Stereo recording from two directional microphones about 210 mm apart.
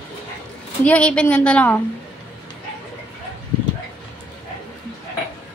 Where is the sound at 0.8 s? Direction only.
5° left (ahead or behind).